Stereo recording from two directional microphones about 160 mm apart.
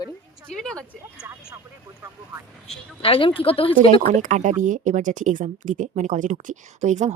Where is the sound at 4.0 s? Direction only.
50° right (ahead or behind).